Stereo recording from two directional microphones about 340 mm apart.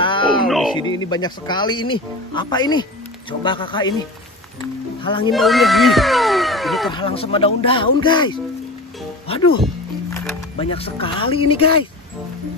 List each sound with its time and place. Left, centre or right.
0.0 s music: centre
0.5 s speech: centre
0.7 s speech: centre
5.0 s speech: centre
5.3 s speech: centre
6.9 s speech: centre
10.1 s speech: centre